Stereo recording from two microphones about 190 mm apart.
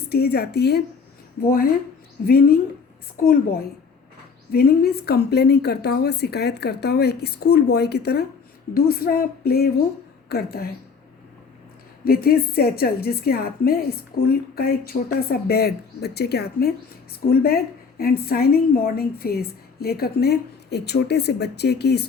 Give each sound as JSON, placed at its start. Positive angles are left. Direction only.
{"t": 0.1, "sound": "a woman's voice", "side_deg": 55}
{"t": 12.0, "sound": "a woman's voice", "side_deg": 50}